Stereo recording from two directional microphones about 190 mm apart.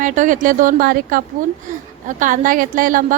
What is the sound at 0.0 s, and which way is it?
A woman's voice, 45° right (ahead or behind).